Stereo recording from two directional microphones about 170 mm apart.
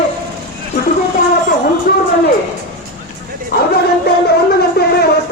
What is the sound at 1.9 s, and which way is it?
Speech, 65° left (ahead or behind).